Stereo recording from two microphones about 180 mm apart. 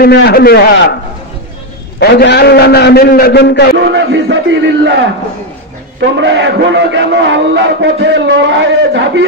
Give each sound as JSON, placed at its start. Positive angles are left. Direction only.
{"t": 0.0, "sound": "a man's voice", "side_deg": 60}
{"t": 2.0, "sound": "a man's voice", "side_deg": 65}
{"t": 3.8, "sound": "a man's voice", "side_deg": -90}
{"t": 6.1, "sound": "a man's voice", "side_deg": -80}